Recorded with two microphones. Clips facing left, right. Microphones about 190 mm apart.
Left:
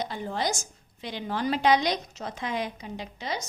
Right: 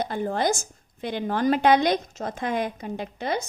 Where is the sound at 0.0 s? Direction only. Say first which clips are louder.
Right 5 dB; 50° right (ahead or behind).